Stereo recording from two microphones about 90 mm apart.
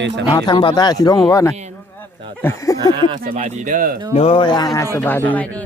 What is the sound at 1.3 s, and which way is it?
Speech, 35° left (ahead or behind).